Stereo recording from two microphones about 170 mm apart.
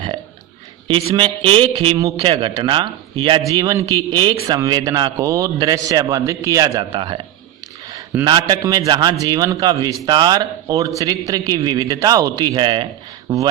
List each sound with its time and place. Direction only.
0.9 s a man's voice: 30° right (ahead or behind)